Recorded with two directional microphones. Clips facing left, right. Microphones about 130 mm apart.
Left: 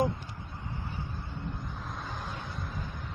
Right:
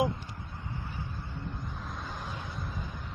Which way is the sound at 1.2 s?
20° left (ahead or behind).